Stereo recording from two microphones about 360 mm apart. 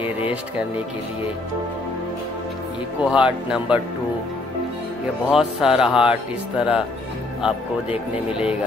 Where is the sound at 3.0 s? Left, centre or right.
Centre.